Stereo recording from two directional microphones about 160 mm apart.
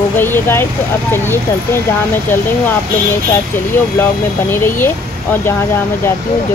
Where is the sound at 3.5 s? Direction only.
15° left (ahead or behind).